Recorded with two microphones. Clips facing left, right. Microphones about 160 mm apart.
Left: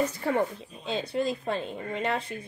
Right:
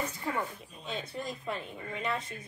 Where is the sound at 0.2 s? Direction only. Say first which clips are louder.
Left 8 dB; 70° left (ahead or behind).